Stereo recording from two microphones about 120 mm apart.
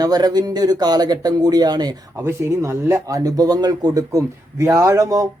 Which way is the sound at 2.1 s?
25° right (ahead or behind).